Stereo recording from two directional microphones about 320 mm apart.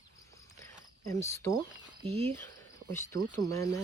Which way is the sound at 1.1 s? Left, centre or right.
Centre.